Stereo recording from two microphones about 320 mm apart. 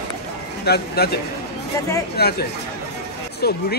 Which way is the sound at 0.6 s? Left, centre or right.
Left.